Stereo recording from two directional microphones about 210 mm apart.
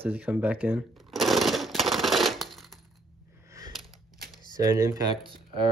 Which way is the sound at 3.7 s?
Centre (ahead or behind).